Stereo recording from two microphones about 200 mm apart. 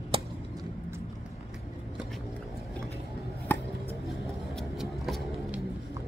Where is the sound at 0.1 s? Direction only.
25° right (ahead or behind).